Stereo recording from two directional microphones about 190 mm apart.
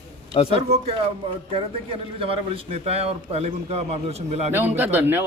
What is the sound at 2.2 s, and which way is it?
A man's voice, 30° right (ahead or behind).